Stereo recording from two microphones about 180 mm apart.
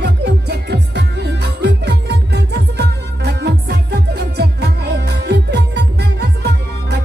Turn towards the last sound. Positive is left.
turn(degrees=-70)  # may be behind; listen again after turning